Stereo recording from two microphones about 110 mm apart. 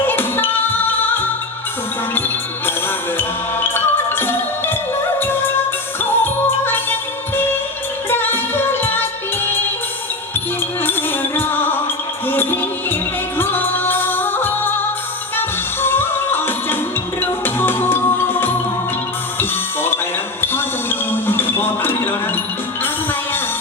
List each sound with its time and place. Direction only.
0.0 s music: 20° left (ahead or behind)
3.2 s music: 20° left (ahead or behind)
6.0 s music: 20° left (ahead or behind)
8.1 s music: 20° left (ahead or behind)
10.8 s music: 20° left (ahead or behind)
20.4 s a sound: 20° left (ahead or behind)